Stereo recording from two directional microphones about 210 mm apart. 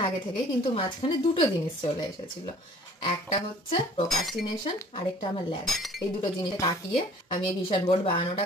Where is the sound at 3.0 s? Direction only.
30° left (ahead or behind).